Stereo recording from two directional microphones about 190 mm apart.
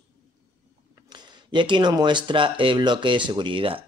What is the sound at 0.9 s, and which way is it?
Speech, 25° right (ahead or behind).